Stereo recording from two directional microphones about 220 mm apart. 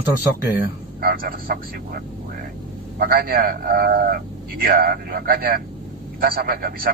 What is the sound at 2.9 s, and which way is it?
A man's voice, 40° right (ahead or behind).